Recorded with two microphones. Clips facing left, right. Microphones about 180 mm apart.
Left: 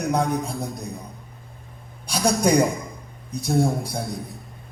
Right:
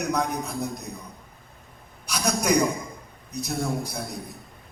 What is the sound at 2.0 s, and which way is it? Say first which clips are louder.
A man's voice: left 4 dB; 30° left (ahead or behind).